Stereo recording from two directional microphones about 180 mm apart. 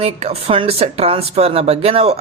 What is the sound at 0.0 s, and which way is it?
Speech, 35° right (ahead or behind).